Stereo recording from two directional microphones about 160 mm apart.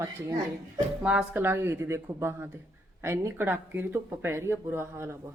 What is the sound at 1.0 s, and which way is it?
Speech, 5° right (ahead or behind).